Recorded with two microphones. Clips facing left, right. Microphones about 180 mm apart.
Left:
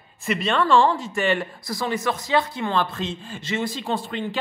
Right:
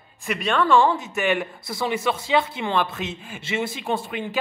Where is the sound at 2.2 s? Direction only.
25° right (ahead or behind).